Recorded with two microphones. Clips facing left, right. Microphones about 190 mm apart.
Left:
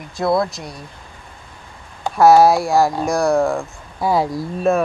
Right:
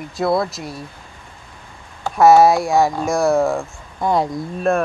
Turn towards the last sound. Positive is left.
turn(degrees=0)  # may be behind; listen again after turning